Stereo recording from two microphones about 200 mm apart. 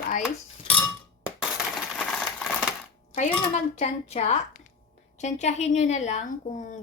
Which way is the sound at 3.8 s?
35° left (ahead or behind).